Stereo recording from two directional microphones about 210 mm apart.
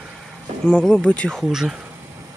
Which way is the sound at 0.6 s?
5° left (ahead or behind).